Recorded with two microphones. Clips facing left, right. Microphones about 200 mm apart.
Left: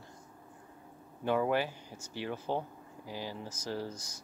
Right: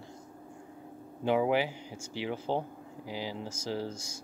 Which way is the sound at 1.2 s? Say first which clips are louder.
Right 3 dB; 15° right (ahead or behind).